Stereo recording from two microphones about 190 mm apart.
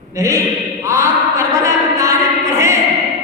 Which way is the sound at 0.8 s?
15° right (ahead or behind).